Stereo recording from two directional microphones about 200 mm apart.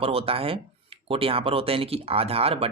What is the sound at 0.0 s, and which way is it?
Speech, 30° right (ahead or behind).